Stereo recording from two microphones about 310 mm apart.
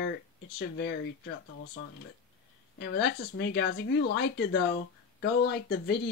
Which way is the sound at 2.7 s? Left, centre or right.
Left.